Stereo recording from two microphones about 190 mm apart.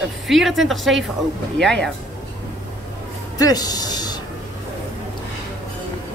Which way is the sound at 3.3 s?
20° left (ahead or behind).